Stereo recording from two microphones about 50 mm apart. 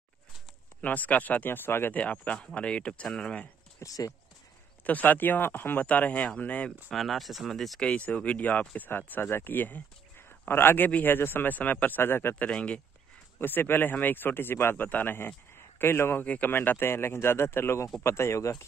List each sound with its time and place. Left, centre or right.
0.7 s speech: left
1.9 s speech: left
2.3 s speech: left
3.8 s speech: left
4.8 s speech: left
5.9 s speech: left
6.9 s speech: centre
7.8 s speech: left
10.9 s speech: left
12.4 s speech: left
13.4 s speech: left
14.9 s speech: left
15.1 s speech: left